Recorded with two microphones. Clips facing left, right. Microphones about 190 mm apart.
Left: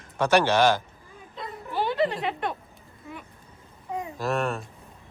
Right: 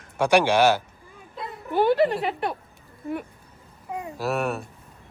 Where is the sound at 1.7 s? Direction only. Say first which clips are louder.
Right 8 dB; 50° right (ahead or behind).